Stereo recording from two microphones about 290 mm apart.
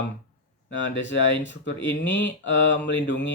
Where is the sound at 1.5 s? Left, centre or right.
Left.